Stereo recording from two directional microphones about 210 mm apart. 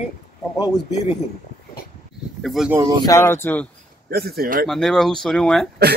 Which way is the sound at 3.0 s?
15° left (ahead or behind).